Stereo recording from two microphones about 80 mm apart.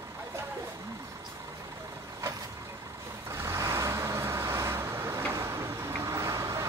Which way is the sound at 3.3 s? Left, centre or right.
Right.